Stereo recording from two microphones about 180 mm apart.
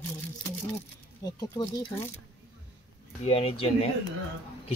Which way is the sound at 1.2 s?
20° left (ahead or behind).